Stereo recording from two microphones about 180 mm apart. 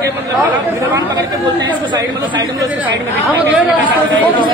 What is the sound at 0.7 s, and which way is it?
Speech, 20° right (ahead or behind).